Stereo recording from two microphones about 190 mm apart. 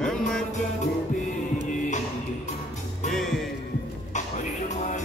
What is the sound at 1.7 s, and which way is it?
Music, 40° left (ahead or behind).